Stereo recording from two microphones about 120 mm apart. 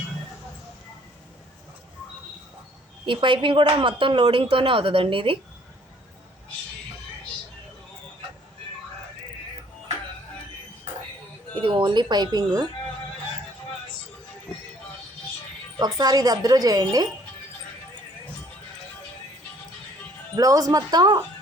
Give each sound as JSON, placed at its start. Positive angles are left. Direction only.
{"t": 3.1, "sound": "speech", "side_deg": -45}
{"t": 11.6, "sound": "a woman's voice", "side_deg": -45}
{"t": 15.8, "sound": "a woman's voice", "side_deg": -35}
{"t": 20.3, "sound": "a woman's voice", "side_deg": -30}